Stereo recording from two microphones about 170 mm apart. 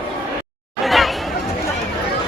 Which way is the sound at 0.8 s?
Centre (ahead or behind).